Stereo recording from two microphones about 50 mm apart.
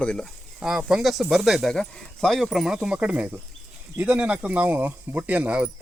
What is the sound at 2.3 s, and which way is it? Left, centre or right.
Speech, centre.